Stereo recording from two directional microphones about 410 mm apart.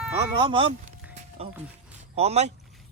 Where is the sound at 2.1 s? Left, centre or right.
Centre.